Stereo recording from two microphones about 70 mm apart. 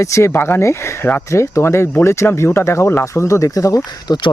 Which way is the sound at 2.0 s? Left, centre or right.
Left.